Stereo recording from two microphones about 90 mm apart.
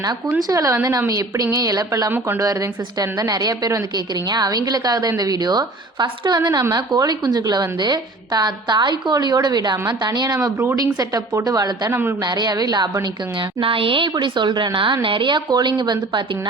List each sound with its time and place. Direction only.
0.4 s a woman's voice: 40° right (ahead or behind)
2.0 s speech: 25° right (ahead or behind)
2.4 s a woman's voice: 40° right (ahead or behind)
11.9 s speech: 25° right (ahead or behind)
12.2 s a woman's voice: 55° right (ahead or behind)
13.6 s a woman's voice: 80° right; by 16.2 s 55° right (ahead or behind)